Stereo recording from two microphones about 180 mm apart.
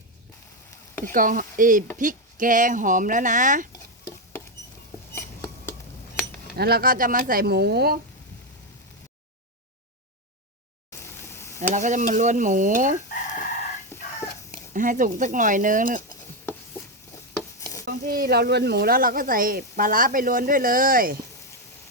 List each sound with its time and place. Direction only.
1.0 s speech: 50° right (ahead or behind)
5.1 s a sound: 15° left (ahead or behind)
6.6 s speech: 60° right (ahead or behind)
11.0 s a sound: 15° left (ahead or behind)
11.7 s speech: 45° right (ahead or behind)
13.9 s chicken: 15° left (ahead or behind)
14.7 s speech: 45° right (ahead or behind)
17.3 s stir: 15° left (ahead or behind)
17.8 s speech: 60° right (ahead or behind)